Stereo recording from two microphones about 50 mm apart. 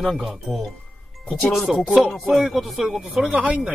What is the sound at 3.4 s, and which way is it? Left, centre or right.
Speech, right.